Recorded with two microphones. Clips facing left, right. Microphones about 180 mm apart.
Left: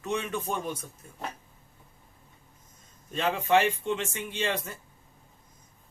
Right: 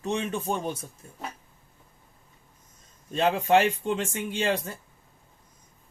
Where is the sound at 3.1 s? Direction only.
35° right (ahead or behind).